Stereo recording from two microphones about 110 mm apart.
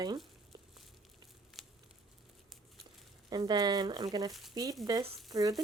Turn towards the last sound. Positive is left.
turn(degrees=-35)  # may be behind; listen again after turning